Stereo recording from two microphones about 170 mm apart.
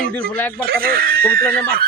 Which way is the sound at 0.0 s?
60° right (ahead or behind).